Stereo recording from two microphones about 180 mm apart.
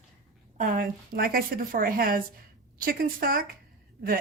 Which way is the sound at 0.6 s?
50° right (ahead or behind).